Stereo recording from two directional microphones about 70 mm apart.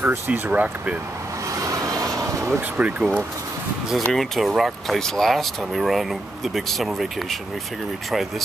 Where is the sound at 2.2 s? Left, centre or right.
Right.